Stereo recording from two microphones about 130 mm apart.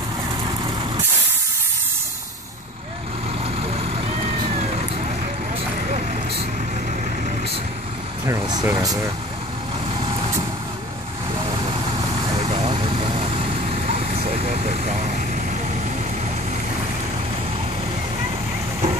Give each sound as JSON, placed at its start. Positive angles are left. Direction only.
{"t": 8.3, "sound": "speech", "side_deg": -30}
{"t": 12.4, "sound": "vehicle", "side_deg": -50}